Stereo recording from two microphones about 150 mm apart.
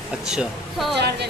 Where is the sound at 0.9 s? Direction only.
90° right.